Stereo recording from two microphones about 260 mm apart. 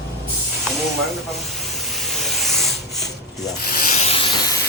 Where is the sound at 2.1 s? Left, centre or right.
Centre.